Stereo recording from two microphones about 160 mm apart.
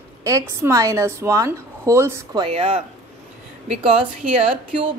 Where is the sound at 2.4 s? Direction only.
35° right (ahead or behind).